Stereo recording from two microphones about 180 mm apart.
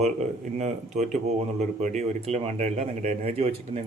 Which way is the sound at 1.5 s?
40° right (ahead or behind).